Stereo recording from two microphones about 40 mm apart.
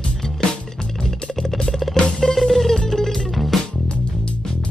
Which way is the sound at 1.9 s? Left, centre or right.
Centre.